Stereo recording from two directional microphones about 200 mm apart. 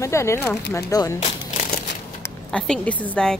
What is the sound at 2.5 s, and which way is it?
Speech, 5° left (ahead or behind).